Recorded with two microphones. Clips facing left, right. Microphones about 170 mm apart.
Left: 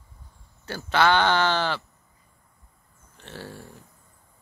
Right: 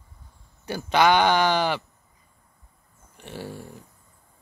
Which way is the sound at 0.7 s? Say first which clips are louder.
Right 2 dB; 15° right (ahead or behind).